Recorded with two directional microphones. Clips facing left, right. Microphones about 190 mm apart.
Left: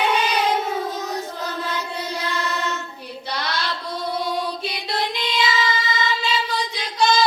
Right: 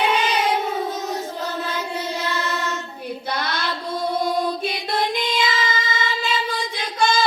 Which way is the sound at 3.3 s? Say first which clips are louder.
Left 1 dB; 50° right (ahead or behind).